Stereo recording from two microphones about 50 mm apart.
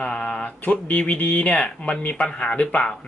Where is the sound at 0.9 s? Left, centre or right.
Left.